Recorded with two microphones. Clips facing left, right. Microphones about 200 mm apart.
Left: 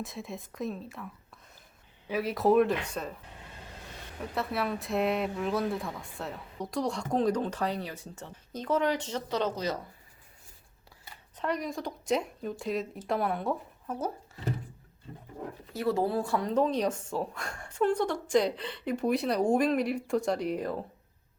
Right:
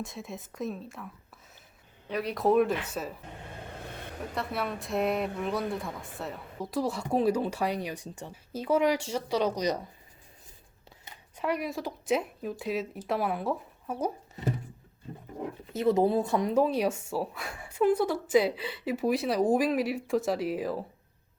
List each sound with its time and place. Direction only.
0.0 s speech: centre (ahead or behind)
3.7 s vehicle: 55° right (ahead or behind)
4.2 s speech: centre (ahead or behind)
11.3 s speech: 10° right (ahead or behind)
15.7 s speech: 20° right (ahead or behind); by 20.8 s 5° right (ahead or behind)